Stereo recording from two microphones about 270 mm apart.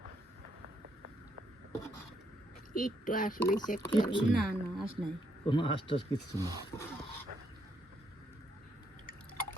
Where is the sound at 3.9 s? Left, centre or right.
Centre.